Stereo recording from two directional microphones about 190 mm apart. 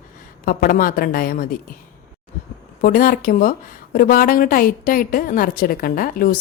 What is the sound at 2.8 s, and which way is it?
A woman's voice, 45° left (ahead or behind).